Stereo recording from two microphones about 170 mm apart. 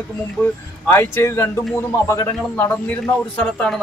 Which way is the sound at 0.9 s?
15° left (ahead or behind).